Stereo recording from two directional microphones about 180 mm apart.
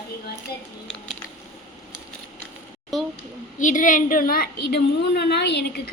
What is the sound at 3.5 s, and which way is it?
A woman's voice, 45° left (ahead or behind).